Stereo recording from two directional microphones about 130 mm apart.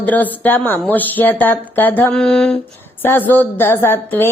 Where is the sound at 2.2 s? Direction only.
5° left (ahead or behind).